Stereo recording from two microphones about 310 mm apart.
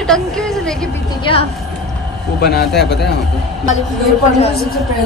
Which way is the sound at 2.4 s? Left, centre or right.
Left.